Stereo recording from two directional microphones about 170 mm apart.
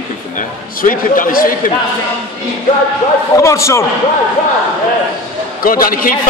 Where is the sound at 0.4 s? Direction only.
55° left (ahead or behind).